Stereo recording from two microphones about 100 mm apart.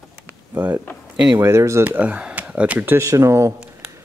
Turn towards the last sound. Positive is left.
turn(degrees=-30)  # may be behind; listen again after turning